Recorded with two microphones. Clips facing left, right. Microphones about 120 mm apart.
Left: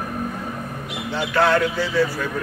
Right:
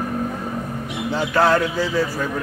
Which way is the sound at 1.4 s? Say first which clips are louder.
Right 1 dB; 35° right (ahead or behind).